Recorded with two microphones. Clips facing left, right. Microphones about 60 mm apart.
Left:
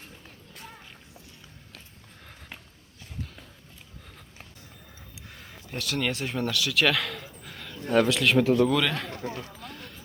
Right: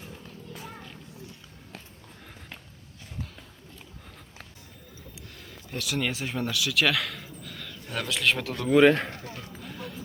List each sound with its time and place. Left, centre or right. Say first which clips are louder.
5.6 s speech: left 1 dB; centre
7.4 s a sound: right 1 dB; centre
7.9 s speech: left 6 dB; centre
8.7 s speech: right 8 dB; right
9.6 s music: right 3 dB; centre